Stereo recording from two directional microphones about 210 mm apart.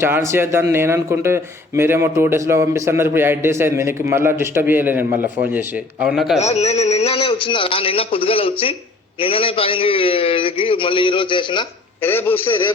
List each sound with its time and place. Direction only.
0.0 s speech: 10° right (ahead or behind)
6.4 s a man's voice: 30° left (ahead or behind)
12.0 s a man's voice: 10° left (ahead or behind)